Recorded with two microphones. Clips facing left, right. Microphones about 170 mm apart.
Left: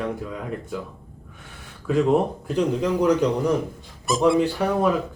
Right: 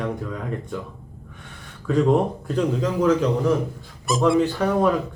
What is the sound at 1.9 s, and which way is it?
A man's voice, 10° left (ahead or behind).